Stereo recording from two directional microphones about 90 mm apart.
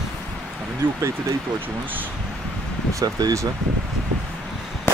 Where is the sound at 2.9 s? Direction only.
45° right (ahead or behind).